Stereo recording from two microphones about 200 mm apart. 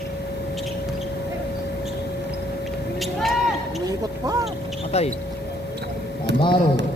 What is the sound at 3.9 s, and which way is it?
Speech, 20° right (ahead or behind).